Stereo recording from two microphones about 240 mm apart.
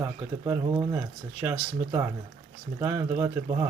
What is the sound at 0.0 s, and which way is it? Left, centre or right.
Speech, centre.